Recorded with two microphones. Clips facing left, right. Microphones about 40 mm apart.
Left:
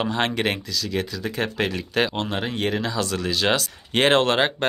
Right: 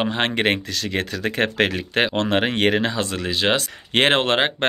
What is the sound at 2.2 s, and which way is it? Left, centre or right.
Speech, right.